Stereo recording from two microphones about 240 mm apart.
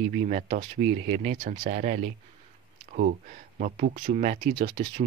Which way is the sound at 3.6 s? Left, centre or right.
Right.